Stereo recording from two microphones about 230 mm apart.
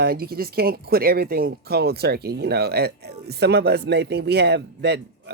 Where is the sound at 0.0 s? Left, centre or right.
Right.